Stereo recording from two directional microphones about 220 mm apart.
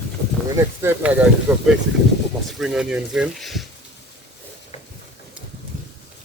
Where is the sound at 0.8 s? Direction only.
5° right (ahead or behind).